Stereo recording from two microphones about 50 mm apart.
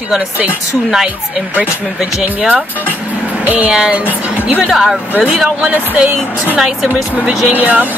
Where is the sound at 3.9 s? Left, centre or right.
Right.